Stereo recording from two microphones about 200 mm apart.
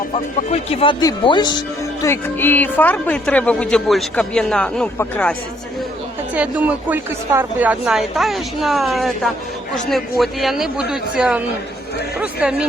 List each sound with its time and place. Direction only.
0.1 s speech: 30° left (ahead or behind)
2.0 s speech: 10° left (ahead or behind)
6.3 s a woman's voice: 5° right (ahead or behind)